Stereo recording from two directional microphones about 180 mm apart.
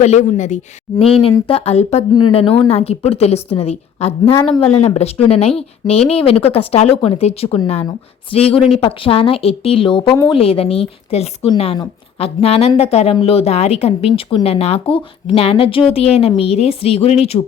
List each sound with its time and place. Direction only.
0.0 s speech: 40° left (ahead or behind)